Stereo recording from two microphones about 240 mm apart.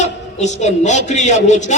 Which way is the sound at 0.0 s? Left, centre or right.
Left.